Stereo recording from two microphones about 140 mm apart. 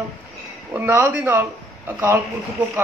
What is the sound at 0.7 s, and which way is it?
A man's voice, 15° right (ahead or behind).